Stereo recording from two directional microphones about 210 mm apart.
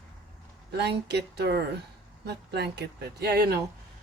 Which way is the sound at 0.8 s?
50° right (ahead or behind).